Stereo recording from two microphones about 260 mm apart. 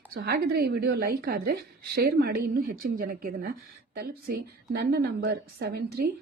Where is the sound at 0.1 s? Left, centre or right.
Right.